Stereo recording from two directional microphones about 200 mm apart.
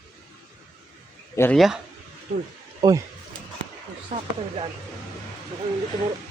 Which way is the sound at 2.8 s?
20° right (ahead or behind).